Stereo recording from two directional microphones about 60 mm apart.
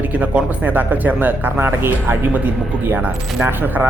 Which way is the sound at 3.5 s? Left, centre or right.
Right.